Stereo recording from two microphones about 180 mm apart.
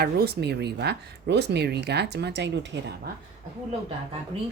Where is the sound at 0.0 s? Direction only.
60° right (ahead or behind).